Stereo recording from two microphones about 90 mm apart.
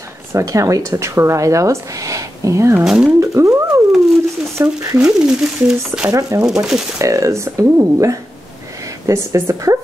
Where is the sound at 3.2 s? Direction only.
35° right (ahead or behind).